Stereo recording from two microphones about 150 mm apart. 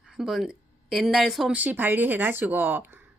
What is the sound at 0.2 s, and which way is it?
Speech, 5° right (ahead or behind).